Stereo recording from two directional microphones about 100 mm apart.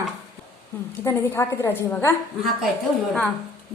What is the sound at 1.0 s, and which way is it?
A woman's voice, 25° left (ahead or behind).